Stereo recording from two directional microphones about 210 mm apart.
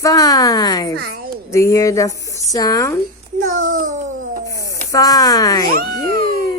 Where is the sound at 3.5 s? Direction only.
40° right (ahead or behind).